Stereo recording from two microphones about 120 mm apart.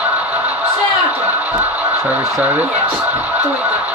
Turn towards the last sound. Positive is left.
turn(degrees=-10)  # may be behind; listen again after turning